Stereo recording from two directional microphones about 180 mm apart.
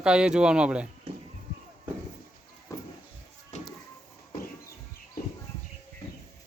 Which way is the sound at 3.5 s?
40° left (ahead or behind).